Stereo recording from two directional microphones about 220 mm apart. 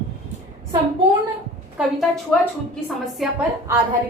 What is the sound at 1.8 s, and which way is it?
A woman's voice, centre (ahead or behind).